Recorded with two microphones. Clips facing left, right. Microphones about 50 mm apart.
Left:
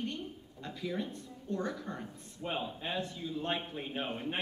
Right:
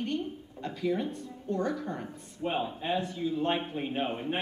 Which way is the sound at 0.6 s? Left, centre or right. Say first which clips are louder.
Right 7 dB; right.